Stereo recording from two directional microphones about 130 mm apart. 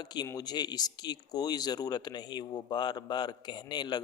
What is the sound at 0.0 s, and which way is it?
Speech, 35° left (ahead or behind).